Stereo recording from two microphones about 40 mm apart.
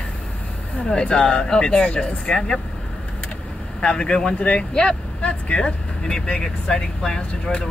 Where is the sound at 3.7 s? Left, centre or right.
Left.